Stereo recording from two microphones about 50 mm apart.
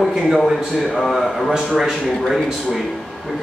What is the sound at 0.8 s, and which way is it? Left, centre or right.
Speech, centre.